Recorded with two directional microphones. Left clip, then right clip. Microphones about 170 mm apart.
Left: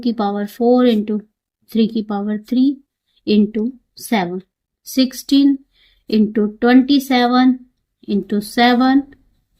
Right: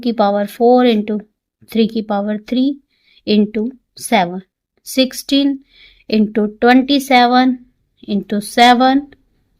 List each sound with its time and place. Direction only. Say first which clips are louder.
0.0 s speech: right 6 dB; 35° right (ahead or behind)
4.9 s speech: right 2 dB; 35° right (ahead or behind)